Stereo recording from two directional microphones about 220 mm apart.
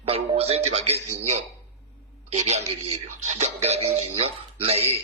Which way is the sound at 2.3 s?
30° right (ahead or behind).